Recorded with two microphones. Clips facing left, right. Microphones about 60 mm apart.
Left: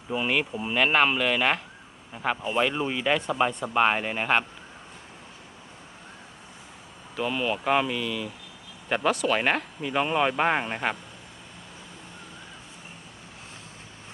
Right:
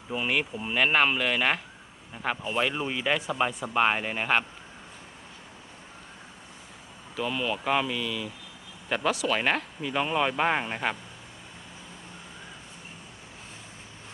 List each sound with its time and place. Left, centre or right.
0.1 s speech: centre
7.2 s speech: centre